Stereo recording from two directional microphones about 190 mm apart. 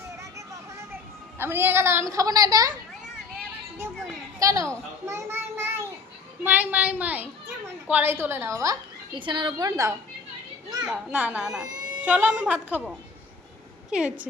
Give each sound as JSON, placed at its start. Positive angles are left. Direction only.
{"t": 0.2, "sound": "vehicle", "side_deg": -15}
{"t": 1.4, "sound": "a woman's voice", "side_deg": -10}
{"t": 4.4, "sound": "a woman's voice", "side_deg": -15}
{"t": 5.0, "sound": "a sound", "side_deg": -15}
{"t": 6.4, "sound": "a woman's voice", "side_deg": -10}
{"t": 13.9, "sound": "a woman's voice", "side_deg": -5}